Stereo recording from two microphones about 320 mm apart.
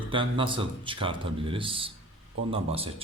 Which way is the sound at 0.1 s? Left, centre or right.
Centre.